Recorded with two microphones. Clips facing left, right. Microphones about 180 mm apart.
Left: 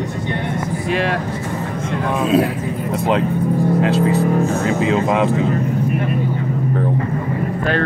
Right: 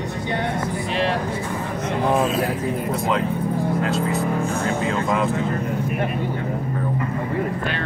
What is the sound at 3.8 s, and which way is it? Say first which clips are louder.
Speech: left 6 dB; 65° left (ahead or behind).